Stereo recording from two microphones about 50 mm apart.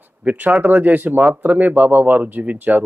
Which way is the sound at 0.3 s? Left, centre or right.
Right.